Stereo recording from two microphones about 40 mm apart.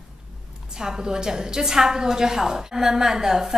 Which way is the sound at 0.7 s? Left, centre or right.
Centre.